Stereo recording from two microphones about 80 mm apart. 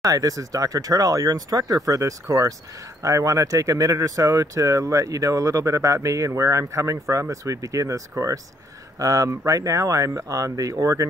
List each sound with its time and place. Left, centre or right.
0.0 s speech: right